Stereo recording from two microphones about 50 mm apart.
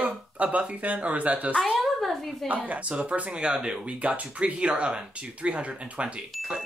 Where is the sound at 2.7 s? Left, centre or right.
Right.